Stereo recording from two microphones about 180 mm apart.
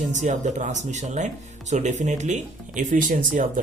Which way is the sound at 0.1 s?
40° right (ahead or behind).